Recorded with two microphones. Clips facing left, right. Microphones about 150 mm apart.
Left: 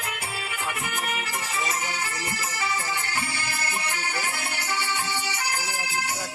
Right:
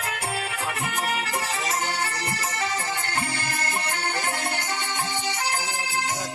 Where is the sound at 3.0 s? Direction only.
55° right (ahead or behind).